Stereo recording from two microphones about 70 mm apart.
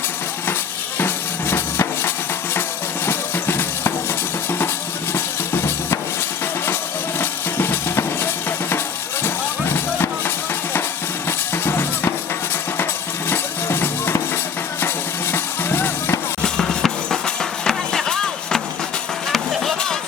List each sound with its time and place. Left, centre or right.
0.9 s music: left
5.1 s a sound: left
7.2 s drum: left
9.2 s music: left
13.3 s music: left
15.3 s music: left
16.4 s music: centre